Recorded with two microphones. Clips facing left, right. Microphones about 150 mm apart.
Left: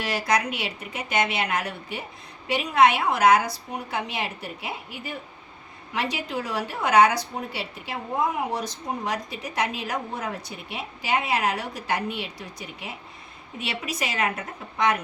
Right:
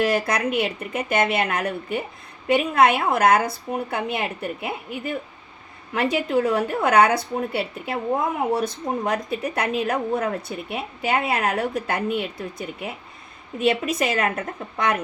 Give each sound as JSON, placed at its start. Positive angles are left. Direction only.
{"t": 0.0, "sound": "a woman's voice", "side_deg": -55}
{"t": 5.9, "sound": "a woman's voice", "side_deg": -55}